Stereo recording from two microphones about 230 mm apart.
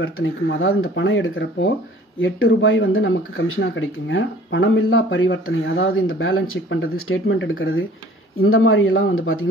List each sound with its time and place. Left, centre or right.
0.0 s speech: left